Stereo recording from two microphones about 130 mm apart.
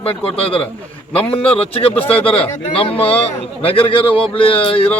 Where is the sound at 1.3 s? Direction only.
45° left (ahead or behind).